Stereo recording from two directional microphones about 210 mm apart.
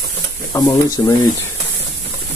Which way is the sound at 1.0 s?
15° left (ahead or behind).